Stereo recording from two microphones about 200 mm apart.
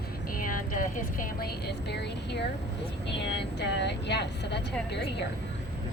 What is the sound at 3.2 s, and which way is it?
A woman's voice, 60° left (ahead or behind).